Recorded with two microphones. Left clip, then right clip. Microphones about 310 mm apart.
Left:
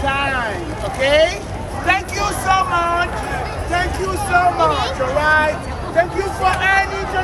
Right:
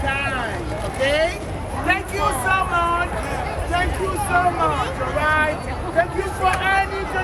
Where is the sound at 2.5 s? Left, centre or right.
Left.